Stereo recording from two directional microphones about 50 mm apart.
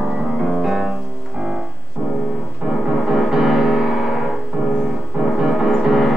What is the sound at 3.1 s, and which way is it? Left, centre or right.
Music, centre.